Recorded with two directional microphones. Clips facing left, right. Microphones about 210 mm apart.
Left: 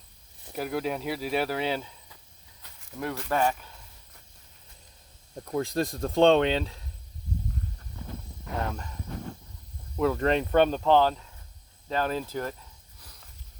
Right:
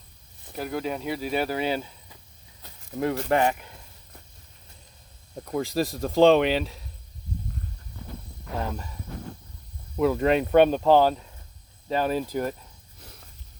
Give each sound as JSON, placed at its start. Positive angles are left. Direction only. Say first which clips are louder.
{"t": 0.5, "sound": "speech", "louder": "even", "side_deg": 5}
{"t": 2.6, "sound": "a sound", "louder": "right 7 dB", "side_deg": -25}
{"t": 5.5, "sound": "speech", "louder": "right 2 dB", "side_deg": 0}
{"t": 10.0, "sound": "speech", "louder": "right 3 dB", "side_deg": -10}